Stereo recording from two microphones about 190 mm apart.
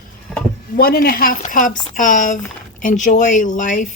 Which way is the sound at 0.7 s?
55° left (ahead or behind).